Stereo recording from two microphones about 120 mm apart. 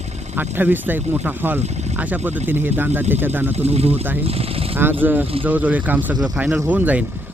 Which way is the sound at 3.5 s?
60° right (ahead or behind).